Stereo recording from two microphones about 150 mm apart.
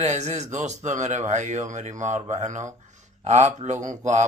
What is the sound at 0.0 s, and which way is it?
Speech, 50° right (ahead or behind).